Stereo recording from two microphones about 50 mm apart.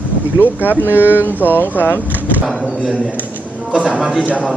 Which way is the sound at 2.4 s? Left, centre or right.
Centre.